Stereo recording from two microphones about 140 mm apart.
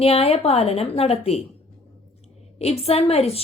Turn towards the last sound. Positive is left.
turn(degrees=45)  # may be behind; listen again after turning